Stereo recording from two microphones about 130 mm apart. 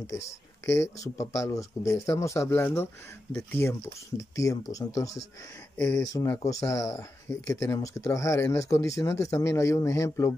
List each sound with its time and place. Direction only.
0.7 s speech: 25° left (ahead or behind)